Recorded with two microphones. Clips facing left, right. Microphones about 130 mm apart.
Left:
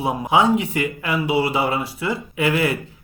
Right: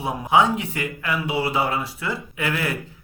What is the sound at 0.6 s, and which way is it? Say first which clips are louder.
Speech: left 5 dB; 65° left (ahead or behind).